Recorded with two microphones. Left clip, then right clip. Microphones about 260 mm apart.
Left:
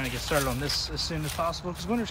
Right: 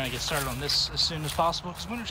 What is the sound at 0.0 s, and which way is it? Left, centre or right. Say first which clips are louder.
Speech: left 2 dB; centre.